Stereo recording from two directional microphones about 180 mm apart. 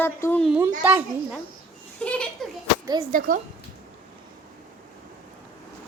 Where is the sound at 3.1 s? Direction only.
50° right (ahead or behind).